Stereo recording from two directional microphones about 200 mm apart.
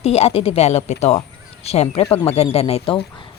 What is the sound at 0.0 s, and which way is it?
Speech, 30° left (ahead or behind).